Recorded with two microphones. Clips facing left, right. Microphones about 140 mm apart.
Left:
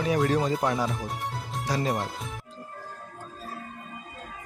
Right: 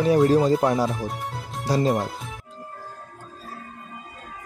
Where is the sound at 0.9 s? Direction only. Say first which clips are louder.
Right 3 dB; centre (ahead or behind).